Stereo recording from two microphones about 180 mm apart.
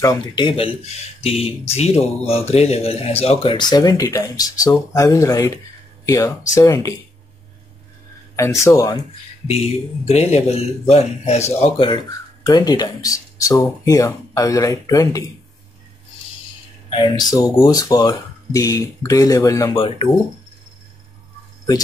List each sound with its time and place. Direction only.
0.0 s speech: 25° left (ahead or behind)
8.4 s speech: 15° left (ahead or behind)
10.0 s speech: 35° left (ahead or behind); by 15.2 s 20° left (ahead or behind)
17.3 s speech: 20° left (ahead or behind)